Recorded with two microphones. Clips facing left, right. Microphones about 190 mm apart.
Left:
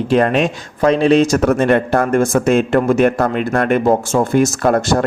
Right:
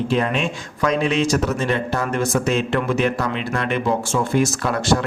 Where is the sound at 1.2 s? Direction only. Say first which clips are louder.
Left 7 dB; 50° left (ahead or behind).